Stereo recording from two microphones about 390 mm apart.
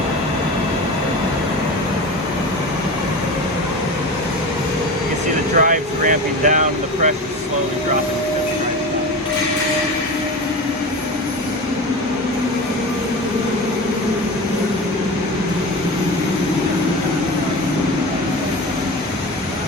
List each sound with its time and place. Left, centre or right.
5.5 s vehicle: centre